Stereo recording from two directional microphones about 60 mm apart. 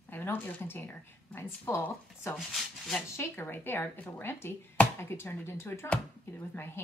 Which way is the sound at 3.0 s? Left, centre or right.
Left.